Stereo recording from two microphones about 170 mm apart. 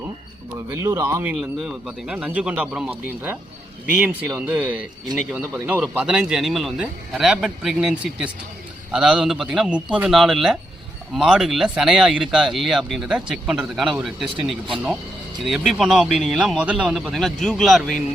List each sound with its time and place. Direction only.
0.7 s speech: 20° right (ahead or behind); by 17.9 s centre (ahead or behind)